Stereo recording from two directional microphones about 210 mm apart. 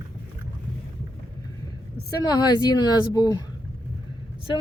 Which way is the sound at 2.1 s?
15° left (ahead or behind).